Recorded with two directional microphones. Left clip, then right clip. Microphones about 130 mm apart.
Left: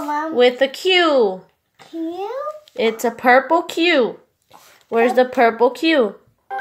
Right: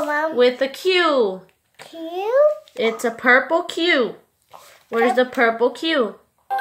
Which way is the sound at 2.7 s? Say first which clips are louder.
Left 2 dB; 20° left (ahead or behind).